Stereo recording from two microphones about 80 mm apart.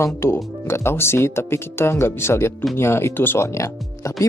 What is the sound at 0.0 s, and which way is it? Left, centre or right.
Speech, left.